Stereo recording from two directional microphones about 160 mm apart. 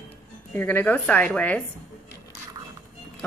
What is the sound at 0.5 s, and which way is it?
Speech, 10° left (ahead or behind).